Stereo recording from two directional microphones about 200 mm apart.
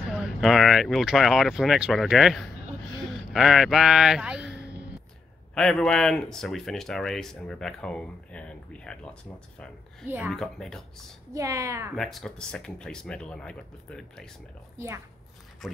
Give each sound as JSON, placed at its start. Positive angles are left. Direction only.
{"t": 0.1, "sound": "speech", "side_deg": 0}
{"t": 10.0, "sound": "a woman's voice", "side_deg": -10}
{"t": 10.3, "sound": "speech", "side_deg": 0}
{"t": 11.3, "sound": "a woman's voice", "side_deg": -15}
{"t": 11.9, "sound": "speech", "side_deg": 0}
{"t": 15.6, "sound": "speech", "side_deg": 0}